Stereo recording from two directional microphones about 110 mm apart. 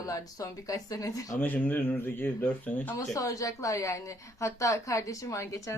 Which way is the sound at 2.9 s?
30° left (ahead or behind).